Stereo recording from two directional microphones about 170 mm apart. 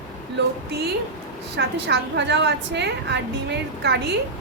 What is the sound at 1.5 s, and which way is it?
A woman's voice, 90° right.